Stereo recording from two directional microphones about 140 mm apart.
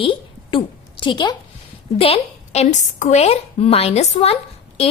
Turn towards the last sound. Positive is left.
turn(degrees=45)  # may be behind; listen again after turning